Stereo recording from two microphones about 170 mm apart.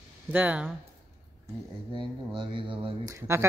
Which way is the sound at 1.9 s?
30° right (ahead or behind).